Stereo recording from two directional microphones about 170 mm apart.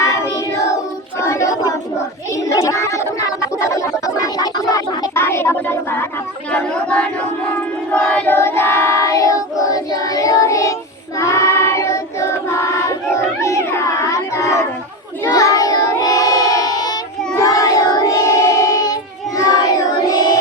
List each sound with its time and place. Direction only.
1.2 s child singing: 15° left (ahead or behind)
2.3 s a sound: 20° left (ahead or behind)
7.9 s child singing: 5° left (ahead or behind)
13.4 s cat: 15° left (ahead or behind)
15.2 s child singing: 20° left (ahead or behind)